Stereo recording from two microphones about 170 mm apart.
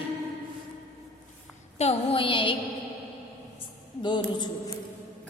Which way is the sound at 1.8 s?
35° left (ahead or behind).